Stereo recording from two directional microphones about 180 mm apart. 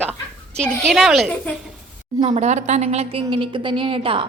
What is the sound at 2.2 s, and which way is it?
A woman's voice, 35° right (ahead or behind).